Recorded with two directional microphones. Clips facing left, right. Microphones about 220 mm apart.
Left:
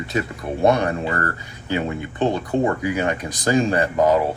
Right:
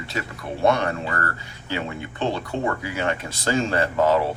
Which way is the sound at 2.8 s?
15° left (ahead or behind).